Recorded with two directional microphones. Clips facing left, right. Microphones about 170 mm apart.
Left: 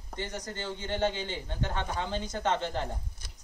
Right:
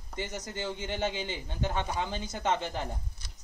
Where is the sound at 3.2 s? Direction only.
50° left (ahead or behind).